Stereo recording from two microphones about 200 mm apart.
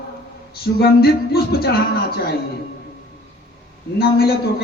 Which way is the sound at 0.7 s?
50° left (ahead or behind).